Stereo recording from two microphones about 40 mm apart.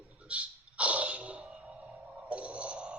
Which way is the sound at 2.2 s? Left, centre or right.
Right.